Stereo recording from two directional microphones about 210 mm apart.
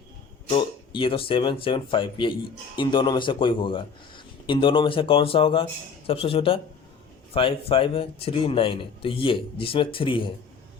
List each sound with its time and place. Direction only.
0.5 s speech: 25° left (ahead or behind)